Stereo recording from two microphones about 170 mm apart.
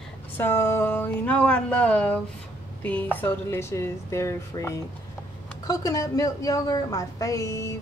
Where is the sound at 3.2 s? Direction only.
15° left (ahead or behind).